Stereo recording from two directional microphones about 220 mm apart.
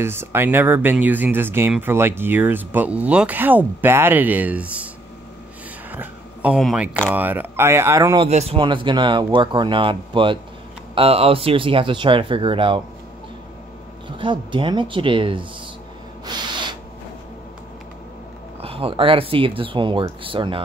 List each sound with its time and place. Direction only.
0.0 s speech: 10° right (ahead or behind)
5.9 s speech: 5° right (ahead or behind)
8.3 s speech: 30° right (ahead or behind)
14.0 s speech: 20° right (ahead or behind)
16.3 s a sound: 20° right (ahead or behind)
18.6 s speech: 25° right (ahead or behind)